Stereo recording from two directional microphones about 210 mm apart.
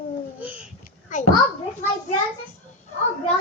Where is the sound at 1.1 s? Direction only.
35° left (ahead or behind).